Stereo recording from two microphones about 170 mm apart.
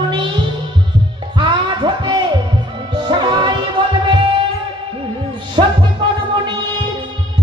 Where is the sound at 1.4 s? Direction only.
30° right (ahead or behind).